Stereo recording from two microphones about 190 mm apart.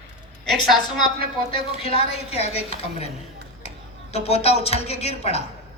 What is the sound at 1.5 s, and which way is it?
Speech, 30° left (ahead or behind).